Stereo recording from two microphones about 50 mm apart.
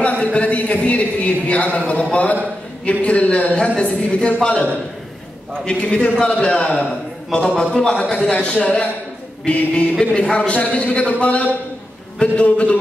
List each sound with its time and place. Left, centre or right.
0.0 s speech: left
2.8 s a man's voice: left
5.7 s a man's voice: centre
8.3 s a man's voice: left